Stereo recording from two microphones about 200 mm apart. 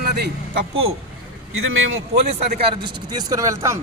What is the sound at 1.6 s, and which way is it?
Speech, 85° right.